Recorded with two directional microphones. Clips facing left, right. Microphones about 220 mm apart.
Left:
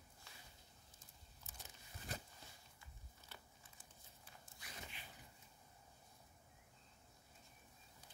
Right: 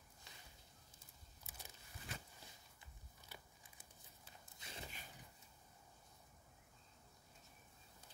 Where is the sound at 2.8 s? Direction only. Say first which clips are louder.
Even; 10° right (ahead or behind).